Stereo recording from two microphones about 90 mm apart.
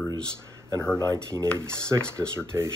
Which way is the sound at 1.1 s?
35° right (ahead or behind).